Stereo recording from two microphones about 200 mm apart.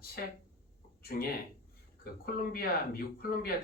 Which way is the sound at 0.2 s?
50° left (ahead or behind).